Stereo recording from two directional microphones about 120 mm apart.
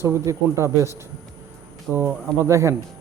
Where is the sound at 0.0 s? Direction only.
25° right (ahead or behind).